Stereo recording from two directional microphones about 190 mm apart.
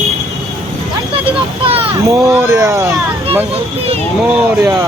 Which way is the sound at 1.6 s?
30° right (ahead or behind).